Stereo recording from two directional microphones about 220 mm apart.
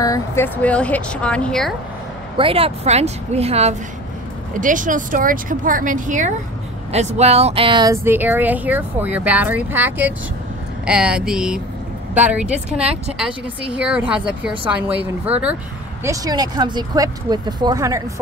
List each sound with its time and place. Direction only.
0.0 s speech: 15° left (ahead or behind)
2.3 s a woman's voice: 25° right (ahead or behind); by 12.8 s 5° right (ahead or behind)
12.8 s a woman's voice: 30° right (ahead or behind)
13.2 s speech: 5° right (ahead or behind)